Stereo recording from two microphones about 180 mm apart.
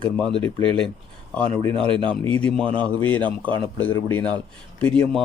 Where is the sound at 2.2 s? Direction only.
10° left (ahead or behind).